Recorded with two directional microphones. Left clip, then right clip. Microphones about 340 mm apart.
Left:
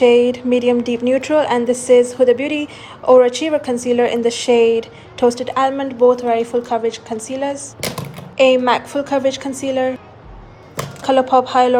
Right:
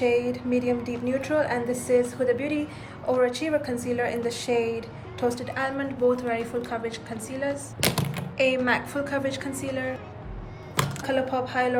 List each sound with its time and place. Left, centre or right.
0.0 s speech: left
0.3 s a woman's voice: left
4.5 s speech: left
5.3 s a woman's voice: centre
7.8 s speech: centre
8.4 s a woman's voice: centre
11.0 s a woman's voice: centre